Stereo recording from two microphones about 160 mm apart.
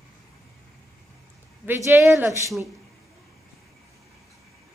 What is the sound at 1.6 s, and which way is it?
Speech, 15° right (ahead or behind).